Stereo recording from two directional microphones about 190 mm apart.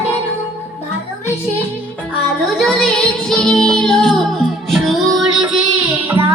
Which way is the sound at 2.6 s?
Centre (ahead or behind).